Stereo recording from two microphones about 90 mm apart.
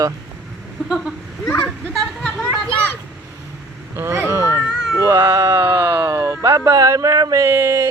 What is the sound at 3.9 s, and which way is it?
Speech, 30° right (ahead or behind).